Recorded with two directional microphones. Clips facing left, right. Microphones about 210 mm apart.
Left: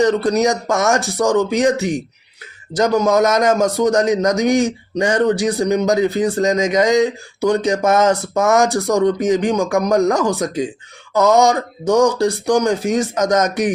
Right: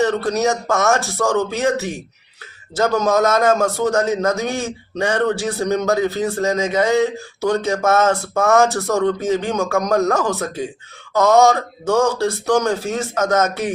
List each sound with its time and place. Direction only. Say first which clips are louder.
0.0 s a man's voice: left 3 dB; 15° left (ahead or behind)